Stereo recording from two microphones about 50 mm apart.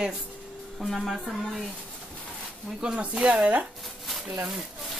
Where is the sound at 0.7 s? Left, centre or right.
Centre.